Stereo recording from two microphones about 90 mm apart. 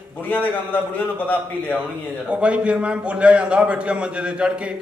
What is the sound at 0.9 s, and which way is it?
Speech, 20° left (ahead or behind).